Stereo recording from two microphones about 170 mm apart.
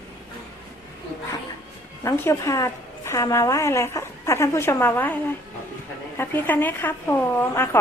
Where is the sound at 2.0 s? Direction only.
15° left (ahead or behind).